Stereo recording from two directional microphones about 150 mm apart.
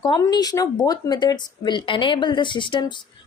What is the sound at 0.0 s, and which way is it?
A woman's voice, 30° left (ahead or behind).